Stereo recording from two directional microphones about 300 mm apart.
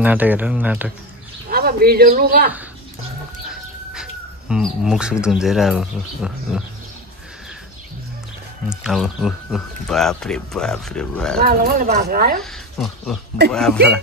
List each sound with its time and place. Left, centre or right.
0.0 s speech: centre
1.5 s speech: right
3.4 s speech: centre
8.6 s speech: centre
11.4 s speech: right
12.4 s speech: centre